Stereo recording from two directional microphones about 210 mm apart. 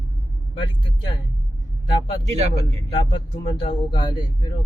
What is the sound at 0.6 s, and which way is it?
Speech, 20° left (ahead or behind).